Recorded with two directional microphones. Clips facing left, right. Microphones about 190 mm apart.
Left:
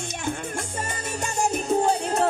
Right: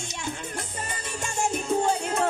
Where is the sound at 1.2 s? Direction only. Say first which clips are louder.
Left 2 dB; 40° left (ahead or behind).